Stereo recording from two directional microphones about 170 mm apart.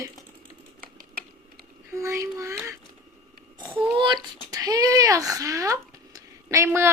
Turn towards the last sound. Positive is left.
turn(degrees=-15)  # may be behind; listen again after turning